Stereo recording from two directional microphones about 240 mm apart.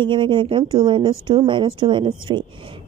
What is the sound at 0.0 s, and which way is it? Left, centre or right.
Speech, centre.